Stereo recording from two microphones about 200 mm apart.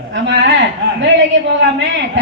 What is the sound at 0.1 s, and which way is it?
A man's voice, 65° right (ahead or behind).